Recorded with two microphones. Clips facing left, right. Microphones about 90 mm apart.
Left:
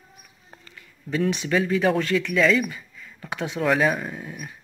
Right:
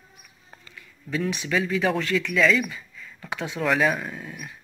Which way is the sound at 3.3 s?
20° left (ahead or behind).